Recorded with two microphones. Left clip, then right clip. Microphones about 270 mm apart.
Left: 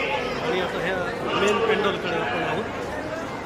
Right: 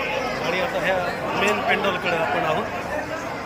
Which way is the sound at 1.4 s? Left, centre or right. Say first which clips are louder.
Right 1 dB; centre.